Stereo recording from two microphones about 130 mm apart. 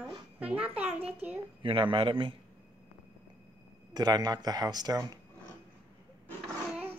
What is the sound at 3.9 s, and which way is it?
Speech, 30° right (ahead or behind).